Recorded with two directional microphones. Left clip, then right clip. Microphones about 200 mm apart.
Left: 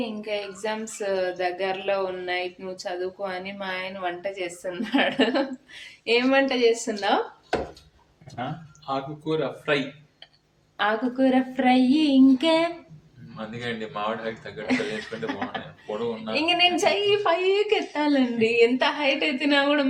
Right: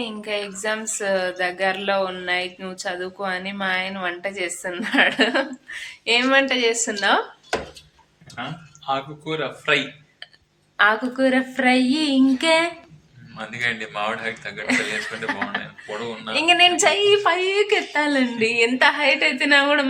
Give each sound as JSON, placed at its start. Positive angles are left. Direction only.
{"t": 0.0, "sound": "speech", "side_deg": 0}
{"t": 8.9, "sound": "a man's voice", "side_deg": 25}
{"t": 10.8, "sound": "speech", "side_deg": -5}
{"t": 13.3, "sound": "speech", "side_deg": 15}
{"t": 14.7, "sound": "speech", "side_deg": -5}